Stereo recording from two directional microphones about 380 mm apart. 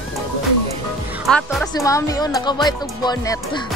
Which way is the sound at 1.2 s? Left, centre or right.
Centre.